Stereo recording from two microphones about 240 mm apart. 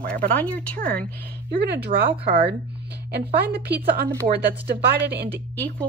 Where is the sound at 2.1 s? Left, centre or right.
Right.